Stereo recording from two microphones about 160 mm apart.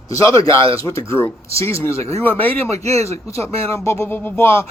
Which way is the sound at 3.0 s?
20° left (ahead or behind).